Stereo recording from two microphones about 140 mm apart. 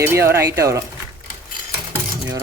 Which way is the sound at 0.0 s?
20° right (ahead or behind).